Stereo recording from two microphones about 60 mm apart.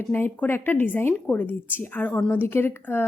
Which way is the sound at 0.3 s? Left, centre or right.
Left.